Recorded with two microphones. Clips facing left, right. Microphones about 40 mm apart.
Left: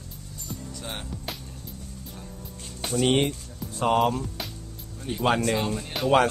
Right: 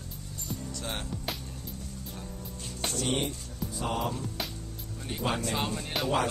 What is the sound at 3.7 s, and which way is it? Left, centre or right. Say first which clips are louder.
Music: left 10 dB; left.